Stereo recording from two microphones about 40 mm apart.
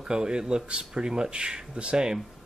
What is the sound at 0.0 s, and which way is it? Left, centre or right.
Speech, centre.